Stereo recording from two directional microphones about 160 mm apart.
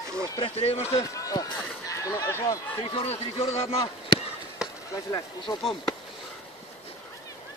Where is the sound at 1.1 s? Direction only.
20° left (ahead or behind).